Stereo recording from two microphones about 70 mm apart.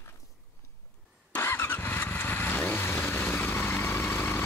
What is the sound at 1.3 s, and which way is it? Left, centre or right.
Vehicle, left.